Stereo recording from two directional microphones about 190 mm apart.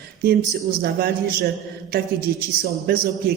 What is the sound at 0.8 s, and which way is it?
A man's voice, 55° right (ahead or behind).